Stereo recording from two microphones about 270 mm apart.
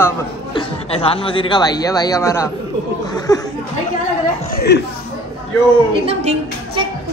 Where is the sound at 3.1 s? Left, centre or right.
Centre.